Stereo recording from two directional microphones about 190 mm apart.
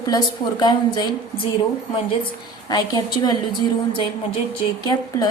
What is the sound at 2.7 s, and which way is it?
A woman's voice, 20° left (ahead or behind).